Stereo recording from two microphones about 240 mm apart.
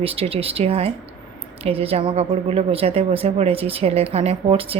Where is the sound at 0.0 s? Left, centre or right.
Right.